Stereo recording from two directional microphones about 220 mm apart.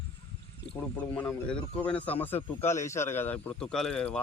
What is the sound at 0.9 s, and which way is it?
Speech, 5° left (ahead or behind).